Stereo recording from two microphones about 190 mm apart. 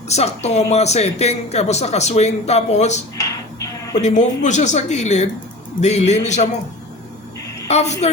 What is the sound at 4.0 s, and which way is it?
Speech, 40° left (ahead or behind).